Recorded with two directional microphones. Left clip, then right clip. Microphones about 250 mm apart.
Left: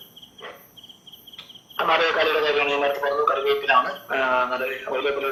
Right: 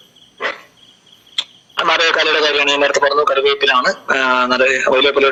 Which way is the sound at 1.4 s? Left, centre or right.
Right.